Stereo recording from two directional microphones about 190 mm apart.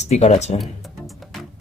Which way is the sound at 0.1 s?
35° left (ahead or behind).